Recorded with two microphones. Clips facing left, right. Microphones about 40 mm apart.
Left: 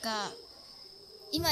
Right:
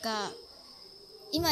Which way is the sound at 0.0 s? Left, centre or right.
Centre.